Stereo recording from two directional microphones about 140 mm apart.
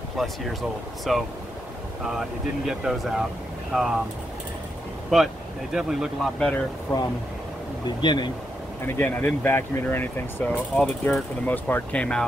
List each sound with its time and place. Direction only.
0.2 s speech: centre (ahead or behind)
5.1 s speech: 5° right (ahead or behind)
8.0 s speech: 35° left (ahead or behind)
8.8 s speech: 15° left (ahead or behind)